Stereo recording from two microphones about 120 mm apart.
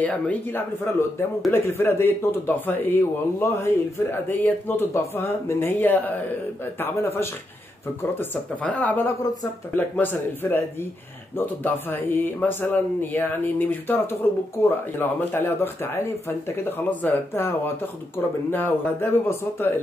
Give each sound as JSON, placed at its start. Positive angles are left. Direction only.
{"t": 0.0, "sound": "speech", "side_deg": 10}
{"t": 8.0, "sound": "speech", "side_deg": 15}
{"t": 17.0, "sound": "speech", "side_deg": 15}